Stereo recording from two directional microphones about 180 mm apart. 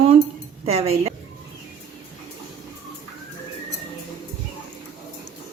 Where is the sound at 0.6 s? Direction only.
35° right (ahead or behind).